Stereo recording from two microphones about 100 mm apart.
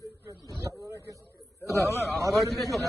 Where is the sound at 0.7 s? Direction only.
35° right (ahead or behind).